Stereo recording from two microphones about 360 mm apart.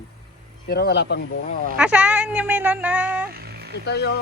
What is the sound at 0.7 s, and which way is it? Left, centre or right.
Speech, left.